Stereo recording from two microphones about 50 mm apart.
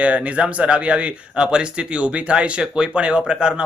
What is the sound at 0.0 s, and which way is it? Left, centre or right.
Speech, right.